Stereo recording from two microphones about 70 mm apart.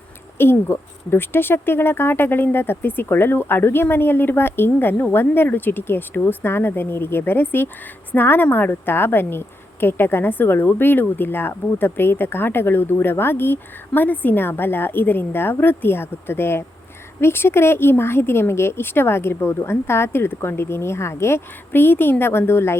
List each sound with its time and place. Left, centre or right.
0.3 s speech: left